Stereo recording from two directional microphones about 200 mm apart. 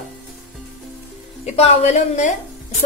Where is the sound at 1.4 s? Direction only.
35° left (ahead or behind).